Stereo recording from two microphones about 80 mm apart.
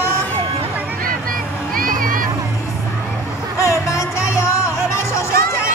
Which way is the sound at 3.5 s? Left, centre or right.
Left.